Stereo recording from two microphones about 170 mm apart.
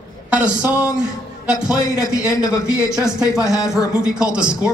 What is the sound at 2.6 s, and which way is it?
Speech, 5° right (ahead or behind).